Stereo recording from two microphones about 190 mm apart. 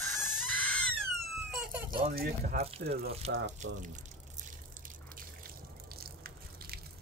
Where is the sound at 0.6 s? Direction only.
5° left (ahead or behind).